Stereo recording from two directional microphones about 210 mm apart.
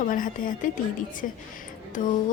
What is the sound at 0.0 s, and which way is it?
A woman's voice, 40° left (ahead or behind).